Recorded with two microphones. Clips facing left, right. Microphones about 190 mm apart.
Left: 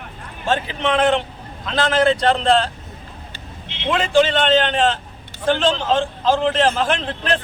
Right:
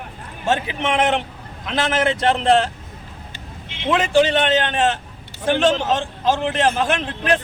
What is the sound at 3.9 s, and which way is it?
Speech, 15° right (ahead or behind).